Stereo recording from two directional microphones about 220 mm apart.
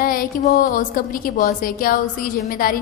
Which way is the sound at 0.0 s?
40° left (ahead or behind).